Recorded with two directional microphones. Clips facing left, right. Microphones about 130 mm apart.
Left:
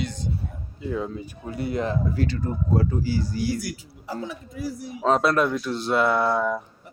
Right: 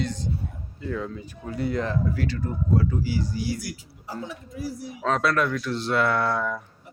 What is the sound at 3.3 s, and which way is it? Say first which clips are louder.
Speech: left 3 dB; 50° left (ahead or behind).